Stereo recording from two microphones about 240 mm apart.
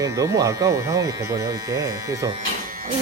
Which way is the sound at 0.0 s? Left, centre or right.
Centre.